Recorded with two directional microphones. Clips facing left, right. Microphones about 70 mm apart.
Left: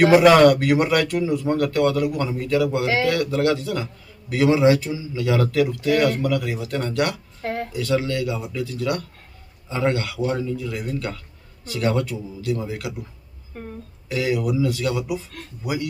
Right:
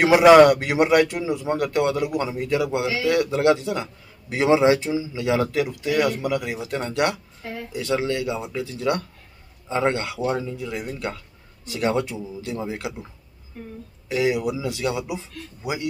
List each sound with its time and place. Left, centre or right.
0.0 s a man's voice: centre
7.4 s a sound: left
7.7 s a man's voice: right
14.0 s a man's voice: right